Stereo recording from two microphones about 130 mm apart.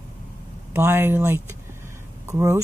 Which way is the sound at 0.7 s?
15° right (ahead or behind).